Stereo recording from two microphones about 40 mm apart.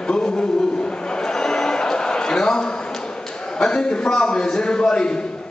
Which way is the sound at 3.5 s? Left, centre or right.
Centre.